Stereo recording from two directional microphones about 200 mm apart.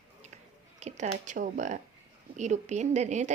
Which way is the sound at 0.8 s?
35° right (ahead or behind).